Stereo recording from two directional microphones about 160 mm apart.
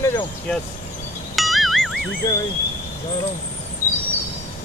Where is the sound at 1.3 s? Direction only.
Centre (ahead or behind).